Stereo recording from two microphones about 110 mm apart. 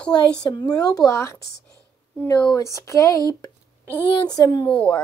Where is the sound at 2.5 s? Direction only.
30° left (ahead or behind).